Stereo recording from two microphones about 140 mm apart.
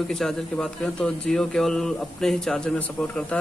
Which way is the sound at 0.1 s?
5° left (ahead or behind).